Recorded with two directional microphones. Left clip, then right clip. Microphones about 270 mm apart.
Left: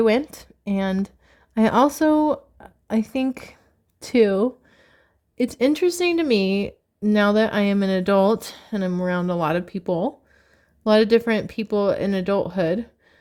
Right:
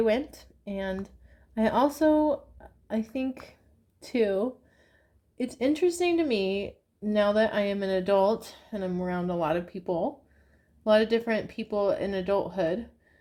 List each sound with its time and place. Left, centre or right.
0.0 s speech: left